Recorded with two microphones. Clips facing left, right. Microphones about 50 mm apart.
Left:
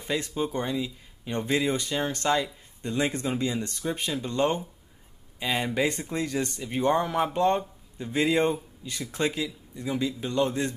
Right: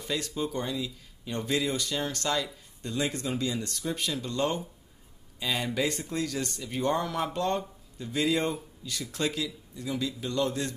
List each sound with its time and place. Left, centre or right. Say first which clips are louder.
0.0 s speech: left 3 dB; left